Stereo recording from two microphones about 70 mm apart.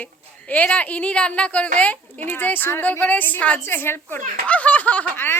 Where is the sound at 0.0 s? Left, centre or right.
Left.